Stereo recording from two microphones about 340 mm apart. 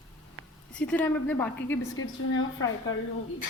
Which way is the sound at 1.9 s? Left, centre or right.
Left.